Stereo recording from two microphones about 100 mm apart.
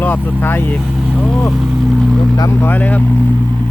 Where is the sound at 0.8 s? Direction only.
Centre (ahead or behind).